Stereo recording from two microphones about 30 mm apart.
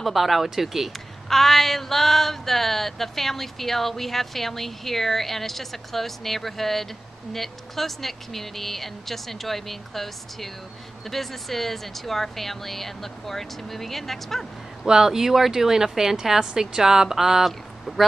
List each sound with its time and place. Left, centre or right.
0.0 s speech: centre
1.3 s a sound: centre
14.9 s a woman's voice: centre
17.5 s speech: centre